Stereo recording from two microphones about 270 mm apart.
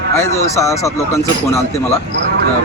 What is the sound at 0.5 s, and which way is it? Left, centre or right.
Speech, centre.